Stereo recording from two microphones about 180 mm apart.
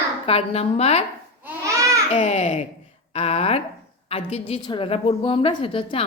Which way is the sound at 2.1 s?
40° left (ahead or behind).